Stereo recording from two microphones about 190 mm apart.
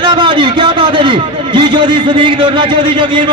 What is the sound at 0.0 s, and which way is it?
A man's voice, 25° right (ahead or behind).